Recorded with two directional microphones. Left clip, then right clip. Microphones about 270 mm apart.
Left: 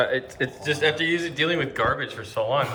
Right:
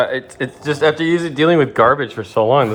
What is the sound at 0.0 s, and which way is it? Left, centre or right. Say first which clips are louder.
Speech: right 5 dB; centre.